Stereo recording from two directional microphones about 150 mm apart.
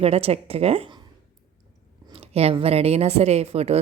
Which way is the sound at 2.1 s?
40° right (ahead or behind).